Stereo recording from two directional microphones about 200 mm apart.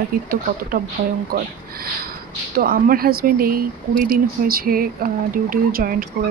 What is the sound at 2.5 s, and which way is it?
Speech, 45° right (ahead or behind).